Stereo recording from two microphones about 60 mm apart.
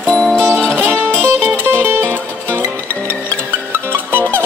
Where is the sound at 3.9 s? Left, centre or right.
Right.